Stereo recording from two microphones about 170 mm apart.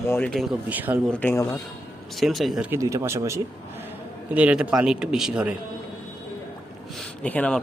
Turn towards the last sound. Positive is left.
turn(degrees=10)  # may be behind; listen again after turning